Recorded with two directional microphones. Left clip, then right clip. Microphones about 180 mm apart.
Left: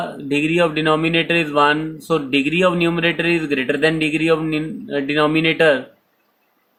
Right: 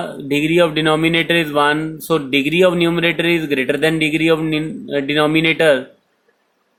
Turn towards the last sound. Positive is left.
turn(degrees=-15)  # may be behind; listen again after turning